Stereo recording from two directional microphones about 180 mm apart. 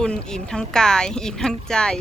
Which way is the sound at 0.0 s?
5° left (ahead or behind).